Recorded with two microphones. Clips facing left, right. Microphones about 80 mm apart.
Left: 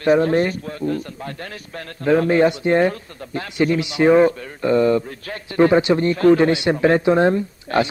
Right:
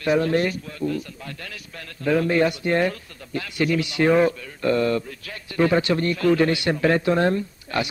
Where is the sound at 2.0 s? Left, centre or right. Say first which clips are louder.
Left 4 dB; left.